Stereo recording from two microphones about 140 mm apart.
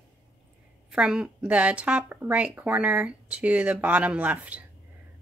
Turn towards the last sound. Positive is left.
turn(degrees=-10)  # may be behind; listen again after turning